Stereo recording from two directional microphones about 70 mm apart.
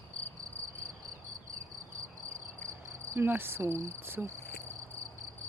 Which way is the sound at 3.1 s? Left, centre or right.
Right.